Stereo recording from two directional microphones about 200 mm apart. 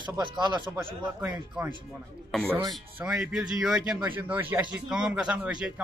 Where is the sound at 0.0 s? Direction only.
20° right (ahead or behind).